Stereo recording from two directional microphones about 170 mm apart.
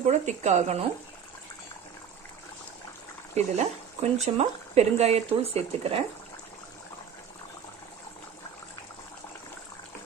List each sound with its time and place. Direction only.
0.0 s speech: 40° right (ahead or behind)
3.3 s speech: 40° right (ahead or behind)